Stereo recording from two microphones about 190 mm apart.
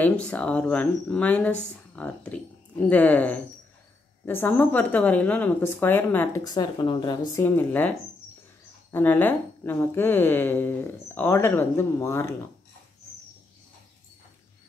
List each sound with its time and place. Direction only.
0.0 s speech: 5° left (ahead or behind)
8.9 s speech: 10° left (ahead or behind)